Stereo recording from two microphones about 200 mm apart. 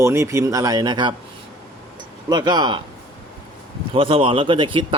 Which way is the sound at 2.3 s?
20° right (ahead or behind).